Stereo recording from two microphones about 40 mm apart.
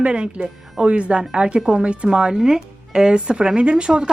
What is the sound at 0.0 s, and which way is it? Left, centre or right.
Speech, right.